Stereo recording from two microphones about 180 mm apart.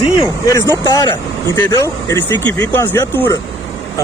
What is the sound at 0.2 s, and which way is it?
Speech, 20° left (ahead or behind).